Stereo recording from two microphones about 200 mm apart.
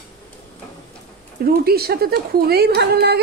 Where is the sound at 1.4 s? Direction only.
50° right (ahead or behind).